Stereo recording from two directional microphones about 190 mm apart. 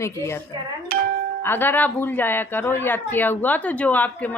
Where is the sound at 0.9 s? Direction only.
50° right (ahead or behind).